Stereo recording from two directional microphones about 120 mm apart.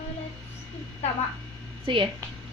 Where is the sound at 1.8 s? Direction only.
45° right (ahead or behind).